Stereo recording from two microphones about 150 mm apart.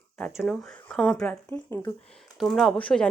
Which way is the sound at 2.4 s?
Centre (ahead or behind).